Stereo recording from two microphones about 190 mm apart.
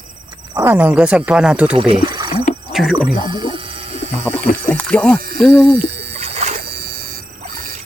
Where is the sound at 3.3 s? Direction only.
25° right (ahead or behind).